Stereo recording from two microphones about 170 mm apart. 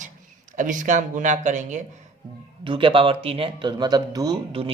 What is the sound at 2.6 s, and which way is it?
Speech, 30° right (ahead or behind).